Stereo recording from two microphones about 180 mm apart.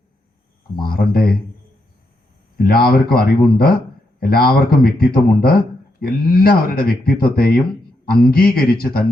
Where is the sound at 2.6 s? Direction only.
55° left (ahead or behind).